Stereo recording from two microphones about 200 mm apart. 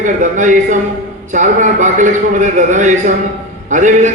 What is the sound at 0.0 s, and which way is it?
A man's voice, 40° right (ahead or behind).